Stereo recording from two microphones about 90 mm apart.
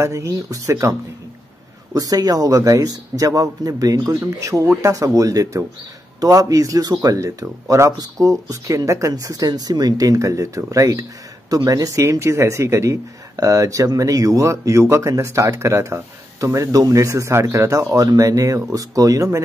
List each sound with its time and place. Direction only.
0.0 s speech: 35° right (ahead or behind)
2.0 s speech: 45° right (ahead or behind)